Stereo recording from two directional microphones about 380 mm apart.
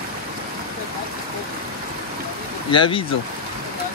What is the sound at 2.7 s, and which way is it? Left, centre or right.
Speech, centre.